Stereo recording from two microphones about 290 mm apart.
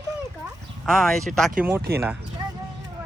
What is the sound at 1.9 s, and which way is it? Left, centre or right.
Speech, right.